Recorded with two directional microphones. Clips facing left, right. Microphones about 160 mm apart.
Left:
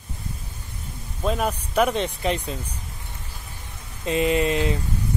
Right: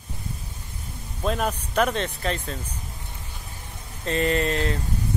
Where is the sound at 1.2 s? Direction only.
5° left (ahead or behind).